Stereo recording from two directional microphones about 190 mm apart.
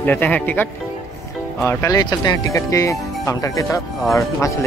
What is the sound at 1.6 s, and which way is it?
Speech, 15° left (ahead or behind).